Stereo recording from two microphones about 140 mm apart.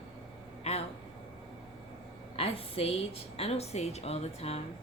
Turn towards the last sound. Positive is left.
turn(degrees=50)  # may be behind; listen again after turning